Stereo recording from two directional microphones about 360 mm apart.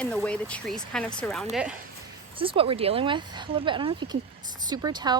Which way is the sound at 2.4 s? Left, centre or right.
Centre.